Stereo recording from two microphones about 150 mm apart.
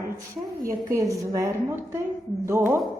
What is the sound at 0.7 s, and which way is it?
A woman's voice, 20° right (ahead or behind).